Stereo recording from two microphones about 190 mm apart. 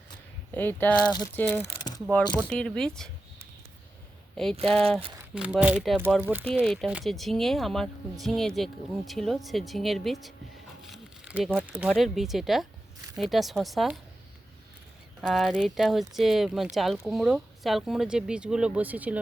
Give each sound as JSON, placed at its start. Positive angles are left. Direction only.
{"t": 0.5, "sound": "speech", "side_deg": 10}
{"t": 1.1, "sound": "speech", "side_deg": 20}
{"t": 2.5, "sound": "speech", "side_deg": 5}
{"t": 4.4, "sound": "speech", "side_deg": 0}
{"t": 4.9, "sound": "speech", "side_deg": -30}
{"t": 5.3, "sound": "speech", "side_deg": -5}
{"t": 10.8, "sound": "crumpling", "side_deg": -5}
{"t": 11.9, "sound": "speech", "side_deg": 0}
{"t": 15.2, "sound": "speech", "side_deg": 0}